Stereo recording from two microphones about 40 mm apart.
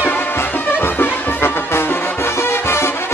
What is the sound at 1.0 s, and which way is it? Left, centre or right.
Music, left.